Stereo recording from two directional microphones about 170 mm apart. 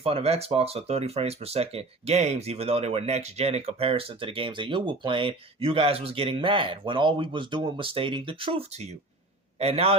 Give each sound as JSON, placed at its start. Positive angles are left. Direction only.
{"t": 0.0, "sound": "speech", "side_deg": -35}